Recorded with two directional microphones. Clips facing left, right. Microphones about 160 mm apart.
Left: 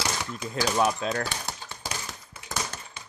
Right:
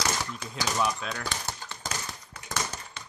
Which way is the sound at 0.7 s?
45° left (ahead or behind).